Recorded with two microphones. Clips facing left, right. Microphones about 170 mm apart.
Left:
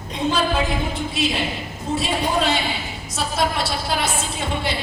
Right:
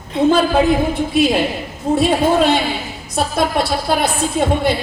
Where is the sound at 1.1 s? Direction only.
55° right (ahead or behind).